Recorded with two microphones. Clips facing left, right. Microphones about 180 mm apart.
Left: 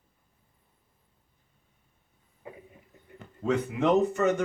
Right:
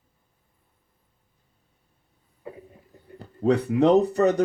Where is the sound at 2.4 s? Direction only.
35° right (ahead or behind).